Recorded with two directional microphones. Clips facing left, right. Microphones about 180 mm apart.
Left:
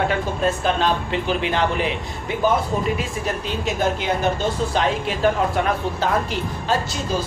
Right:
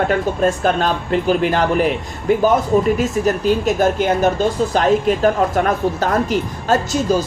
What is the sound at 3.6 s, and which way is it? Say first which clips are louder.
Speech: right 6 dB; 45° right (ahead or behind).